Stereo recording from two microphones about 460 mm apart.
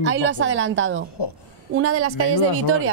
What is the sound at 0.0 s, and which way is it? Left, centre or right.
A woman's voice, right.